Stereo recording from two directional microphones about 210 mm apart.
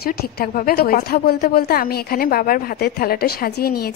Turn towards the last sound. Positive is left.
turn(degrees=45)  # may be behind; listen again after turning